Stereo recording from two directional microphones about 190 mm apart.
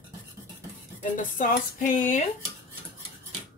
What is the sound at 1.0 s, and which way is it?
Speech, 45° left (ahead or behind).